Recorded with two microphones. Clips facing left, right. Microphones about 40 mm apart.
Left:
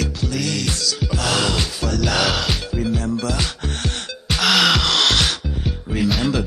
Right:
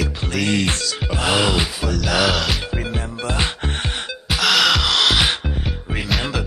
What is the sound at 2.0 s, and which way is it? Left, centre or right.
Music, centre.